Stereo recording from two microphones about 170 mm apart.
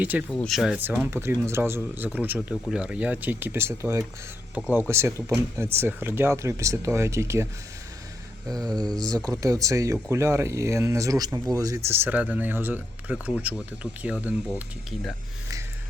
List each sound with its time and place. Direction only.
0.0 s speech: 10° right (ahead or behind)
0.3 s speech: 5° left (ahead or behind); by 7.4 s 15° right (ahead or behind)
8.5 s speech: 25° right (ahead or behind)